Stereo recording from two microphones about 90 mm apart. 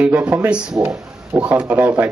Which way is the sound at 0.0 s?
15° right (ahead or behind).